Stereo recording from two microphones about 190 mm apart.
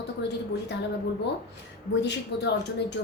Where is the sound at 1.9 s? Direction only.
65° left (ahead or behind).